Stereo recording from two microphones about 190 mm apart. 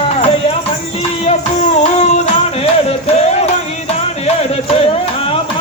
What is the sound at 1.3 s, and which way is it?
Music, 35° left (ahead or behind).